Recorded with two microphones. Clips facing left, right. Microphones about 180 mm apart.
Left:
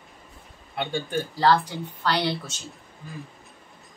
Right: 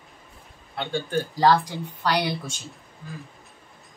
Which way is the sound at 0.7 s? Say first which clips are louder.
Right 1 dB; 15° left (ahead or behind).